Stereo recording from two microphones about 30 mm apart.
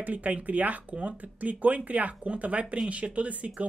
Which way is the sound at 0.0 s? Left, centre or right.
Right.